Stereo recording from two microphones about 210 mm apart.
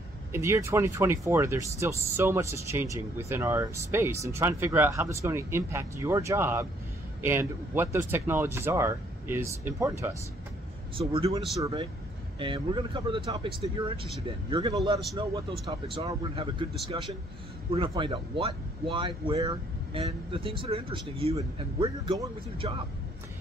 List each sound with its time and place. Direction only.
0.3 s speech: 15° right (ahead or behind)
11.0 s speech: 25° right (ahead or behind)
15.9 s speech: 25° right (ahead or behind)